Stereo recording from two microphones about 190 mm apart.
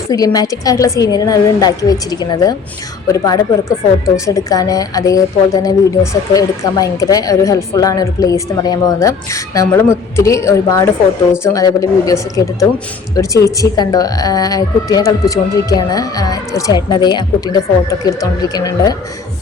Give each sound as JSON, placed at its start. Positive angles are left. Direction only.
{"t": 0.1, "sound": "a woman's voice", "side_deg": 20}